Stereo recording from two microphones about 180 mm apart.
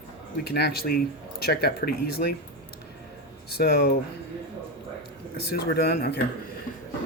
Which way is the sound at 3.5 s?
60° left (ahead or behind).